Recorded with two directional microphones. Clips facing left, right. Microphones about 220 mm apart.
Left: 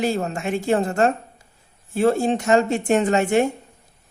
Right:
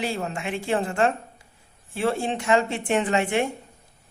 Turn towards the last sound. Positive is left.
turn(degrees=45)  # may be behind; listen again after turning